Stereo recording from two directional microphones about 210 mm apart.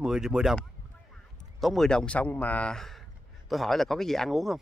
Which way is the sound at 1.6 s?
Centre (ahead or behind).